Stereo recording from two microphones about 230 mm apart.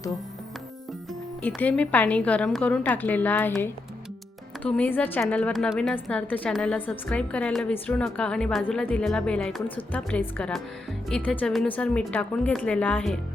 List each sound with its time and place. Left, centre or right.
1.4 s a woman's voice: centre